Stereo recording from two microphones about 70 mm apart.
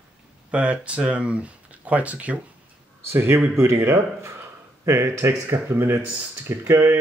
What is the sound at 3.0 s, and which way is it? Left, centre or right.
Speech, right.